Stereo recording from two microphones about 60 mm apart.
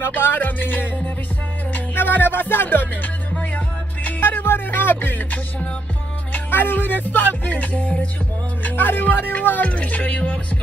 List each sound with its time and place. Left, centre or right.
0.0 s music: left
8.6 s speech: left